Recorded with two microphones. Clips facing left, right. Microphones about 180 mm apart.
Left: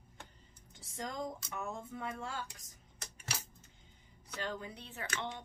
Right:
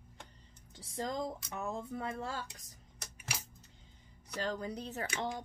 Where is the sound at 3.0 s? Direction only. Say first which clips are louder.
Even; 10° right (ahead or behind).